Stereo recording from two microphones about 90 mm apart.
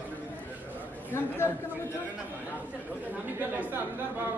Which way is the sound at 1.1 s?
25° left (ahead or behind).